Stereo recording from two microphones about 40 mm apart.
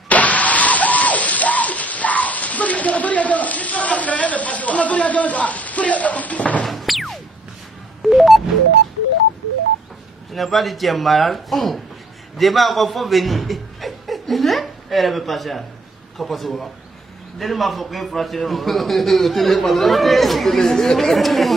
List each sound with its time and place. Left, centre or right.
0.1 s a sound: left
6.6 s music: centre
10.3 s a man's voice: centre